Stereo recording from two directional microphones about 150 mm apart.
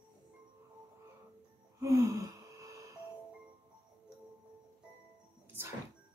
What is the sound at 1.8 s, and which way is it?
Gasp, 20° right (ahead or behind).